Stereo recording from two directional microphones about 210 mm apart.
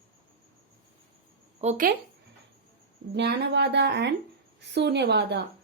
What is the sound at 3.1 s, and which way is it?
A woman's voice, 55° right (ahead or behind).